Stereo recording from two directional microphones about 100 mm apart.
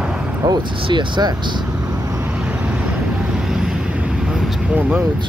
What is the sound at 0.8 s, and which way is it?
Speech, 50° right (ahead or behind).